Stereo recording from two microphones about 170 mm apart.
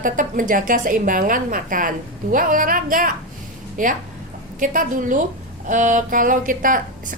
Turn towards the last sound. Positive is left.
turn(degrees=-55)  # may be behind; listen again after turning